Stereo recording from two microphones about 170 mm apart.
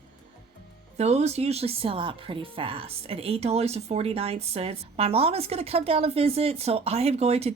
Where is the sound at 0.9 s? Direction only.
40° right (ahead or behind).